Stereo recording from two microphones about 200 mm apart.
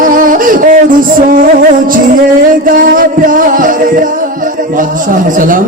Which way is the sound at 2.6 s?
45° right (ahead or behind).